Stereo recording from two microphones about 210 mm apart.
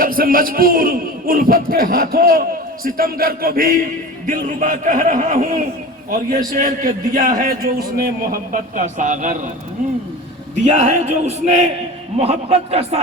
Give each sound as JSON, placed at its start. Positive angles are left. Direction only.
{"t": 0.0, "sound": "a man's voice", "side_deg": -45}
{"t": 10.7, "sound": "a man's voice", "side_deg": -35}